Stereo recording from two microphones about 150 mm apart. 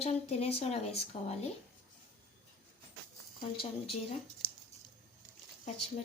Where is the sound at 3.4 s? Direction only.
35° left (ahead or behind).